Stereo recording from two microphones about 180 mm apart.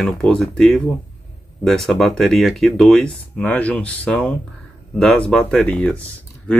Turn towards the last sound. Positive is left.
turn(degrees=10)  # may be behind; listen again after turning